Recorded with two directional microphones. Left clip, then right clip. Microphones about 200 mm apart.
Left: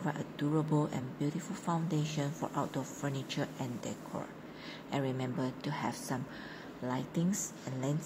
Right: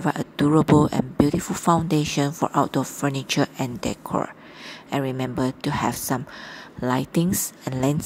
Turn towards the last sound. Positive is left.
turn(degrees=-35)  # may be behind; listen again after turning